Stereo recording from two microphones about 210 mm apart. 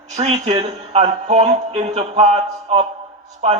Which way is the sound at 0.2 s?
30° right (ahead or behind).